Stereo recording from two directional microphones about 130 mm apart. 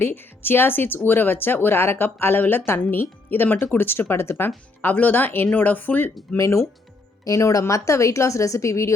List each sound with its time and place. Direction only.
0.0 s speech: 15° left (ahead or behind)